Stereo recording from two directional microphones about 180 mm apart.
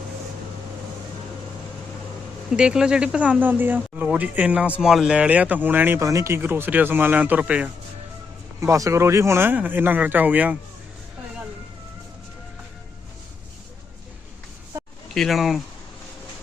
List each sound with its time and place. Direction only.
2.6 s speech: 5° right (ahead or behind)
8.6 s speech: 15° right (ahead or behind)
15.1 s speech: centre (ahead or behind)